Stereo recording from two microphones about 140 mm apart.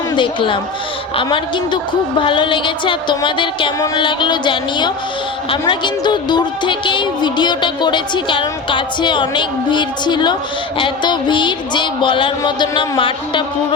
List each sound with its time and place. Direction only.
0.1 s speech: 35° left (ahead or behind)